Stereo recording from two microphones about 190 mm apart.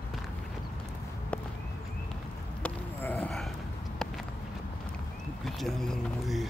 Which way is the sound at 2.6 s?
10° left (ahead or behind).